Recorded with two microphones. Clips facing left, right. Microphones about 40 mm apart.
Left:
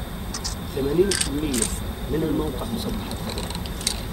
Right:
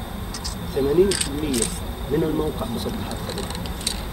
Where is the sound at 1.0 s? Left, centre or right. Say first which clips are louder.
Right 2 dB; right.